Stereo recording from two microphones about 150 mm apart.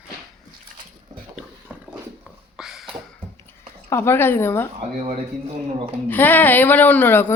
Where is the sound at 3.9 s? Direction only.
15° left (ahead or behind).